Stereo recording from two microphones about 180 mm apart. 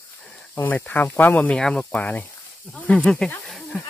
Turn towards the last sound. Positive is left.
turn(degrees=0)  # may be behind; listen again after turning